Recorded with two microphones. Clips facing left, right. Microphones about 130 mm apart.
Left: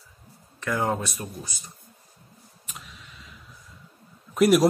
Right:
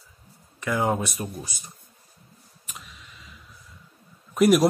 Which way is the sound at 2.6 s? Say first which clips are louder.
Even; centre (ahead or behind).